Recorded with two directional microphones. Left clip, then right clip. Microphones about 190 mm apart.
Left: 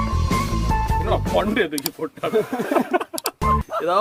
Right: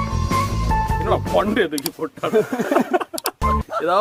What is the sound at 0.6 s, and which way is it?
Speech, centre (ahead or behind).